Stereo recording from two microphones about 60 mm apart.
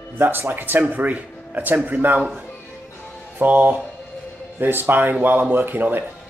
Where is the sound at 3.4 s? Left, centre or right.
Right.